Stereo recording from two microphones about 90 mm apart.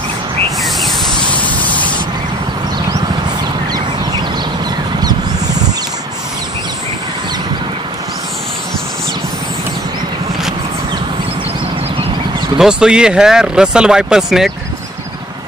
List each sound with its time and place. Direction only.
0.6 s snake: centre (ahead or behind)
1.4 s spray: 15° left (ahead or behind)
12.5 s speech: 10° right (ahead or behind)